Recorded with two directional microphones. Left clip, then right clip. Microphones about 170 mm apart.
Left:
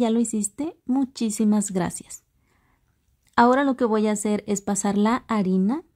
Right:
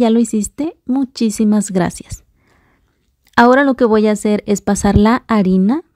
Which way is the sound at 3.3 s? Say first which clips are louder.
Right 8 dB; 35° right (ahead or behind).